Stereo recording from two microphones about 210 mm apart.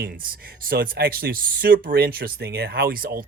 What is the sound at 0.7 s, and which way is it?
Speech, 45° right (ahead or behind).